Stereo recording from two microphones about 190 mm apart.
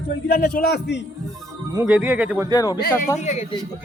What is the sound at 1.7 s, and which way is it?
Speech, 10° right (ahead or behind).